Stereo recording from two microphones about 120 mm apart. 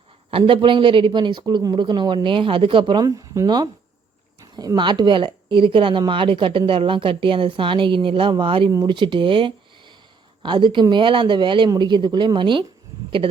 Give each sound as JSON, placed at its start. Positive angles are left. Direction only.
{"t": 0.3, "sound": "a woman's voice", "side_deg": -50}